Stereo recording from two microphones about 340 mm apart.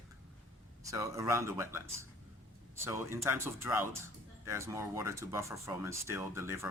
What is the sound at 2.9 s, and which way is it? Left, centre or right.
Speech, centre.